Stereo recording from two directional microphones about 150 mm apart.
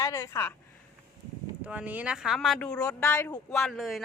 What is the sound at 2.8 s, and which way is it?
Speech, 20° left (ahead or behind).